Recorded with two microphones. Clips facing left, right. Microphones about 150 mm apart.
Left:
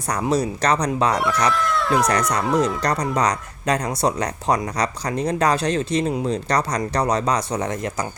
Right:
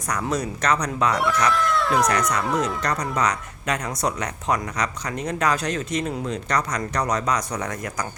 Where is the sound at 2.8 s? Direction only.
35° left (ahead or behind).